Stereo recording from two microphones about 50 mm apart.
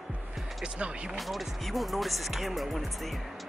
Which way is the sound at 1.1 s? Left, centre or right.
Centre.